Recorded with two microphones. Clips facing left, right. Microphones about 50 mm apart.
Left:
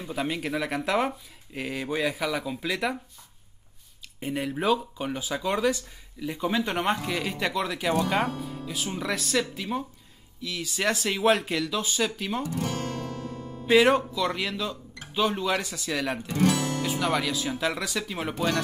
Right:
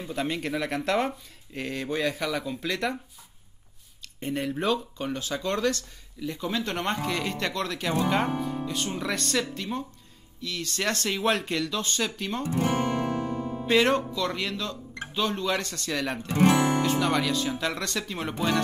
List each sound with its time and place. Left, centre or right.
0.0 s speech: centre
4.2 s speech: centre
12.4 s music: right
13.7 s speech: centre
16.3 s music: right
16.8 s speech: centre